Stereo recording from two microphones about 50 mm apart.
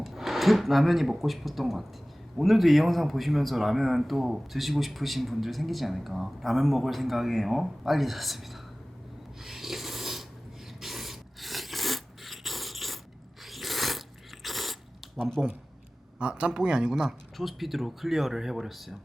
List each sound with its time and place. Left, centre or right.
0.0 s speech: centre
9.4 s snoring: centre
10.8 s filing: centre
13.4 s crunch: centre
14.4 s a sound: centre
16.1 s a man's voice: right
17.3 s speech: centre